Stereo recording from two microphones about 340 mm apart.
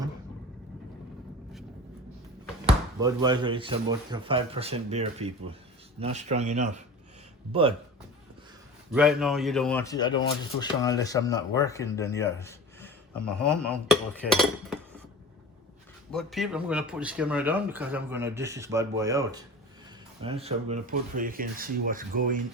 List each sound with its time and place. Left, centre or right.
2.6 s speech: centre
8.9 s speech: centre
16.1 s speech: centre; by 22.4 s right